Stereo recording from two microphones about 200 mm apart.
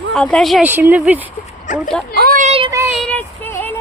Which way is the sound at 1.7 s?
40° left (ahead or behind).